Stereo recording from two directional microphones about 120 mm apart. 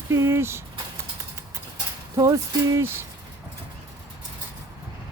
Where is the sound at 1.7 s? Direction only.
30° right (ahead or behind).